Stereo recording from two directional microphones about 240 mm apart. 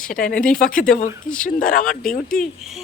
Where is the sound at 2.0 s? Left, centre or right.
Centre.